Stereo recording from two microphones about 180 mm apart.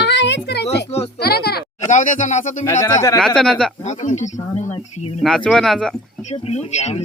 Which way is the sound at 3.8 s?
40° left (ahead or behind).